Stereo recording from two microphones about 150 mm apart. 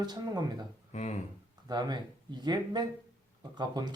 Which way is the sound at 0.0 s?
30° right (ahead or behind).